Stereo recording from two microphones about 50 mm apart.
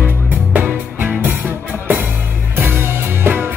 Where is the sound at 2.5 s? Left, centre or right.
Right.